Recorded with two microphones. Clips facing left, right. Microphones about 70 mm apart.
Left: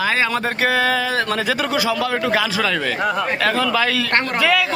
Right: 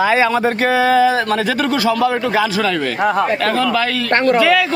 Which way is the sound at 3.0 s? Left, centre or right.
Centre.